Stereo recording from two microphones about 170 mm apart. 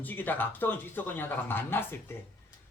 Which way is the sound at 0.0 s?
10° left (ahead or behind).